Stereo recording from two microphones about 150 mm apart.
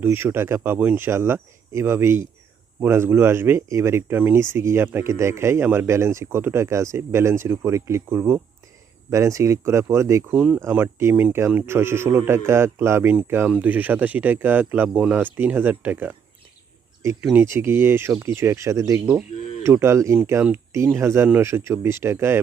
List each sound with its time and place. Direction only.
0.0 s speech: 15° right (ahead or behind)
17.3 s speech: 15° right (ahead or behind)